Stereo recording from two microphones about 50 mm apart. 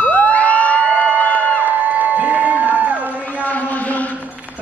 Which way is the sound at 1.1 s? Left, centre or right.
Left.